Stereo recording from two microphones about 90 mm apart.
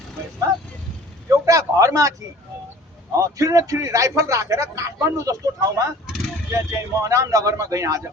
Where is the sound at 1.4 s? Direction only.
40° right (ahead or behind).